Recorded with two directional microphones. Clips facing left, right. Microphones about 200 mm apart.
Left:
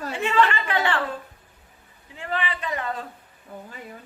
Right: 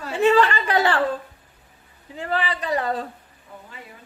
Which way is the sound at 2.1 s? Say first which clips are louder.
Right 4 dB; 35° right (ahead or behind).